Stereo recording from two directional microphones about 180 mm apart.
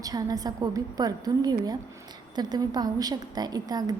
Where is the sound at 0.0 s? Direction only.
20° right (ahead or behind).